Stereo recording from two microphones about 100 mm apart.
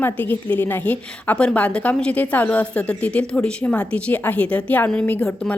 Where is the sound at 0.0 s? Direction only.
15° left (ahead or behind).